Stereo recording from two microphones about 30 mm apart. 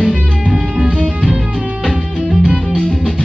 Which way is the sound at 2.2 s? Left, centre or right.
Right.